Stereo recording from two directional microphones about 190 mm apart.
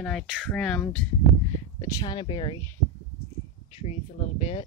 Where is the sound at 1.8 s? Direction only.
20° left (ahead or behind).